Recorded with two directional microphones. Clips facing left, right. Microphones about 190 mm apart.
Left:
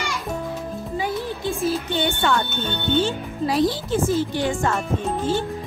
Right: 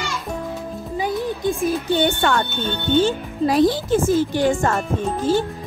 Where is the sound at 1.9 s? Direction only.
50° right (ahead or behind).